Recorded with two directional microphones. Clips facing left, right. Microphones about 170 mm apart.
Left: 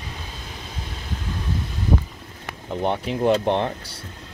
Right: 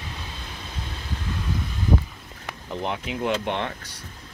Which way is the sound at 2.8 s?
35° left (ahead or behind).